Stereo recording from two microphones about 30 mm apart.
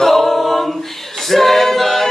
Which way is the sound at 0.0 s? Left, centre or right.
Centre.